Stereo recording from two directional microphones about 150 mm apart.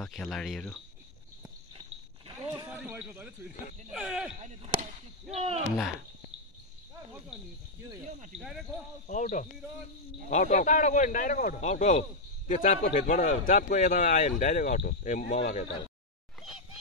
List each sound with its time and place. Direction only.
0.0 s speech: centre (ahead or behind)
1.7 s a sound: 35° right (ahead or behind)
2.9 s a man's voice: 10° right (ahead or behind)
5.3 s speech: 45° right (ahead or behind)
8.0 s speech: 55° right (ahead or behind)
9.0 s a man's voice: 60° left (ahead or behind)
15.3 s a man's voice: 50° left (ahead or behind)